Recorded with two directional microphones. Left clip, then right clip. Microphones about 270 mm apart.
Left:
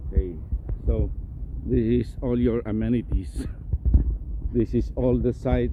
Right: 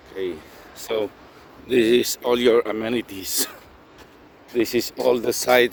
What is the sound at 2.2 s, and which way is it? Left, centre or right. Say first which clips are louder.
Speech: right 8 dB; centre.